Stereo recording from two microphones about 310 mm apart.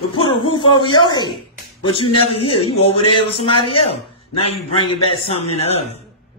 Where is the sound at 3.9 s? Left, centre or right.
Centre.